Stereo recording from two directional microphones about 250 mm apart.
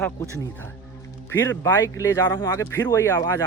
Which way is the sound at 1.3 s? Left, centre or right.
Centre.